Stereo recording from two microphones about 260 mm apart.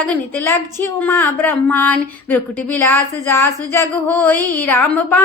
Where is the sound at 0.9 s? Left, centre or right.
Centre.